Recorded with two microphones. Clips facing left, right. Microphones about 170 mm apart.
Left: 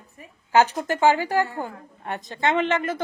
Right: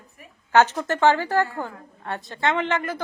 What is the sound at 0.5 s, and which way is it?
A woman's voice, 10° left (ahead or behind).